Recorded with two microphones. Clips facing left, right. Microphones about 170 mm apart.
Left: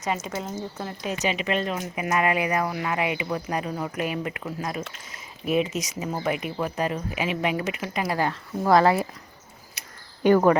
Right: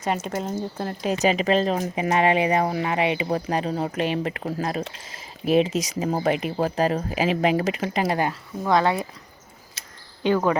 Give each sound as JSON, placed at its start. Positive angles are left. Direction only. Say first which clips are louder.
{"t": 0.2, "sound": "speech", "louder": "right 4 dB", "side_deg": -50}
{"t": 1.0, "sound": "speech", "louder": "right 6 dB", "side_deg": -35}
{"t": 8.6, "sound": "speech", "louder": "left 2 dB", "side_deg": 0}
{"t": 10.2, "sound": "speech", "louder": "left 3 dB", "side_deg": 15}